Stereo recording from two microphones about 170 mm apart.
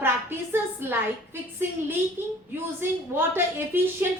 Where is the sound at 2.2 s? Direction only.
15° right (ahead or behind).